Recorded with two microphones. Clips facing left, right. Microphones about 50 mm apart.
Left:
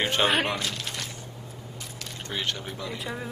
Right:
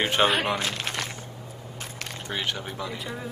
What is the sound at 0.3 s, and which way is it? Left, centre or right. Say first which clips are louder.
Speech: even; centre.